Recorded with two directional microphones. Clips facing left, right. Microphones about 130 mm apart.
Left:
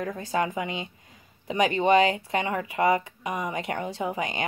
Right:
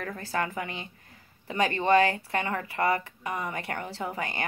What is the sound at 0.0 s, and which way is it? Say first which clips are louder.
A woman's voice: left 4 dB; 20° left (ahead or behind).